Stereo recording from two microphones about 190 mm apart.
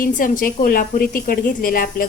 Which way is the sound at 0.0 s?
45° left (ahead or behind).